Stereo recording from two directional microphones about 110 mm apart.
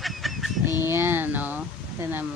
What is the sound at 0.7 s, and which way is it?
Speech, 20° right (ahead or behind).